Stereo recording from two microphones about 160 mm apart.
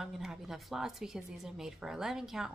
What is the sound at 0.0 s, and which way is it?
A woman's voice, 5° right (ahead or behind).